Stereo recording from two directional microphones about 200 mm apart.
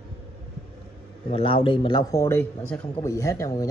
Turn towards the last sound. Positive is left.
turn(degrees=15)  # may be behind; listen again after turning